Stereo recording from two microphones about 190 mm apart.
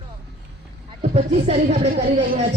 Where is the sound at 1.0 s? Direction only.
35° right (ahead or behind).